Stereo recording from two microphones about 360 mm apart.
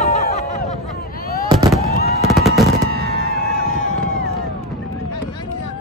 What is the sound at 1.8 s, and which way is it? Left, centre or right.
Fireworks, left.